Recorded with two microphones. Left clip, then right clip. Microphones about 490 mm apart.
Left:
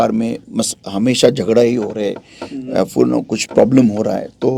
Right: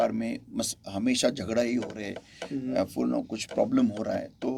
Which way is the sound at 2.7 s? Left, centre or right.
Left.